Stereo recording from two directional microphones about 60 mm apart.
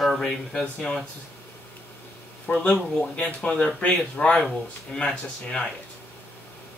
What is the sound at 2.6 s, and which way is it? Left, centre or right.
Speech, centre.